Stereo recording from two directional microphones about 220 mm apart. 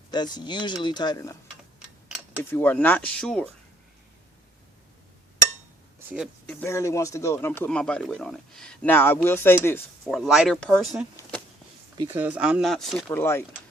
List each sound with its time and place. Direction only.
0.1 s speech: 20° left (ahead or behind)
2.4 s speech: 10° left (ahead or behind)
6.4 s speech: 5° left (ahead or behind)
11.2 s a sound: 5° left (ahead or behind)
11.9 s speech: 10° right (ahead or behind)
13.1 s speech: 10° left (ahead or behind)